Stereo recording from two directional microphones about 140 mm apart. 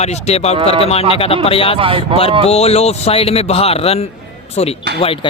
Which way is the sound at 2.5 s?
45° left (ahead or behind).